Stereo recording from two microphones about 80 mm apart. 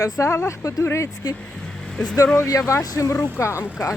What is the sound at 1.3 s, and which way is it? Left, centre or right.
Speech, centre.